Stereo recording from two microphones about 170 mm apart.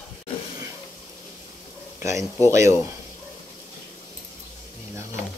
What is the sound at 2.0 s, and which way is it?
Speech, 15° right (ahead or behind).